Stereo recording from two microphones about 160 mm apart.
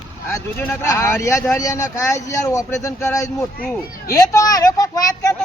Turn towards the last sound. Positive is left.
turn(degrees=20)  # may be behind; listen again after turning